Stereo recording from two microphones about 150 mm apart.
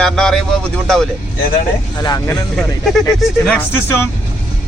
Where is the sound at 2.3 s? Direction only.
5° left (ahead or behind).